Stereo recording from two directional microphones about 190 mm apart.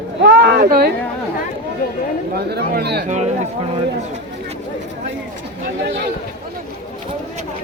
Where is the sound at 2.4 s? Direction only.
55° right (ahead or behind).